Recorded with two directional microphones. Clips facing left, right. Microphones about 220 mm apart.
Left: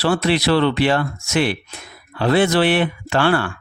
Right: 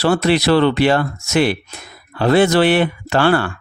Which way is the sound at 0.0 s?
45° right (ahead or behind).